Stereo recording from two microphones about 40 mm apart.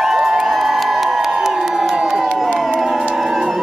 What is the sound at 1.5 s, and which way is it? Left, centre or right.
Crowd, centre.